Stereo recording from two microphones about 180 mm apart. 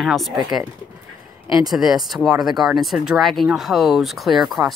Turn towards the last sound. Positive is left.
turn(degrees=0)  # may be behind; listen again after turning